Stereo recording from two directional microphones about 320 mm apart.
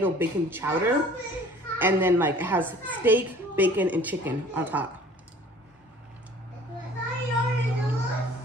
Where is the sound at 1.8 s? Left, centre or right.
Centre.